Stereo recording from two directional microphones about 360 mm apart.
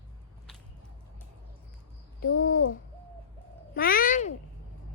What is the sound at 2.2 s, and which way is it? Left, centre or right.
Speech, left.